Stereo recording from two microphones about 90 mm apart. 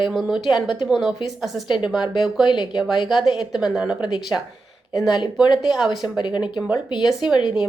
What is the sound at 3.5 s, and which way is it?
Speech, 5° right (ahead or behind).